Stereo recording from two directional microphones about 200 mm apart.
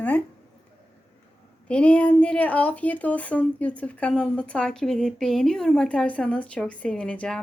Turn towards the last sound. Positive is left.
turn(degrees=5)  # may be behind; listen again after turning